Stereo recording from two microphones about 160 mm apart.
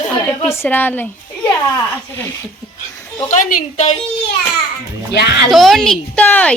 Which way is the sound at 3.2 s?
50° left (ahead or behind).